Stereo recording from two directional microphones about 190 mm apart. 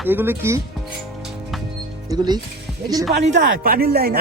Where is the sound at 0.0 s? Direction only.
10° right (ahead or behind).